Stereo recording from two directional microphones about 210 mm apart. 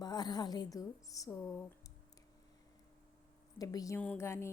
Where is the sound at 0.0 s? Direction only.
20° left (ahead or behind).